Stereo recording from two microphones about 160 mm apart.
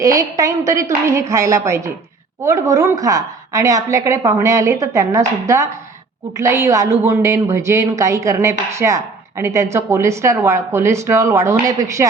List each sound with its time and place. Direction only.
0.0 s a woman's voice: 20° right (ahead or behind)